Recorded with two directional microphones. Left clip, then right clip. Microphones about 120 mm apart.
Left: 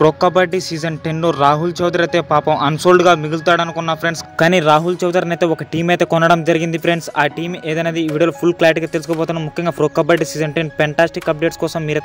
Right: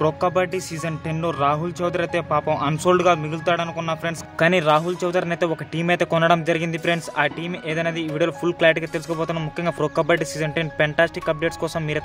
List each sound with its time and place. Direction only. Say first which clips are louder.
0.0 s a man's voice: left 8 dB; 35° left (ahead or behind)